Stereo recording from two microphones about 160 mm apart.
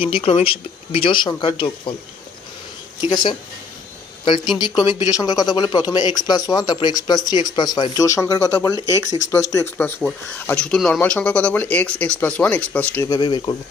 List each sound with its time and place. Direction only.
0.0 s speech: 35° left (ahead or behind)
3.0 s speech: 30° left (ahead or behind)
4.6 s speech: 30° left (ahead or behind)
8.7 s speech: 20° right (ahead or behind)
9.3 s speech: 20° left (ahead or behind)
13.1 s speech: 30° left (ahead or behind)